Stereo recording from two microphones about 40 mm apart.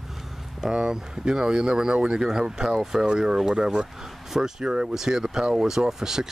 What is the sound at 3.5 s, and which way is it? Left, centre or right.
Speech, right.